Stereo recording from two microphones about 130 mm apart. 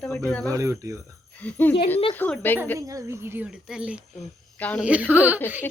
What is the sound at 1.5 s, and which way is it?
Speech, 15° left (ahead or behind).